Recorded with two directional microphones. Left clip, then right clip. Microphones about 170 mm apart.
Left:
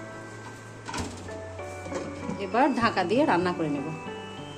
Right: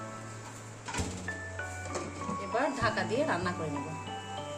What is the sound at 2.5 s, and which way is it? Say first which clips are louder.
Speech: left 7 dB; 50° left (ahead or behind).